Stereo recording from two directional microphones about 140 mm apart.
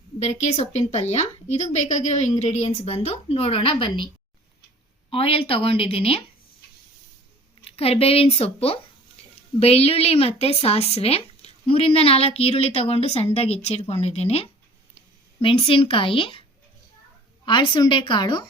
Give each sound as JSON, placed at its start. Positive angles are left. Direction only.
{"t": 0.2, "sound": "speech", "side_deg": 55}
{"t": 5.1, "sound": "a woman's voice", "side_deg": 40}
{"t": 7.8, "sound": "a woman's voice", "side_deg": 45}
{"t": 17.4, "sound": "a woman's voice", "side_deg": 35}